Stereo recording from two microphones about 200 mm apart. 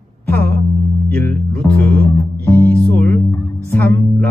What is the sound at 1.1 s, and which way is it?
Music, 10° left (ahead or behind).